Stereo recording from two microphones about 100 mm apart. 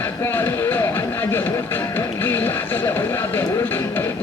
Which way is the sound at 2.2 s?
20° left (ahead or behind).